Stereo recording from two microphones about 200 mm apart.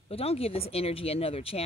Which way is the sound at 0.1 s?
30° left (ahead or behind).